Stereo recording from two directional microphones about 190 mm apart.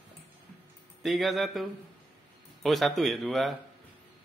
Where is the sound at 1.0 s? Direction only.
Centre (ahead or behind).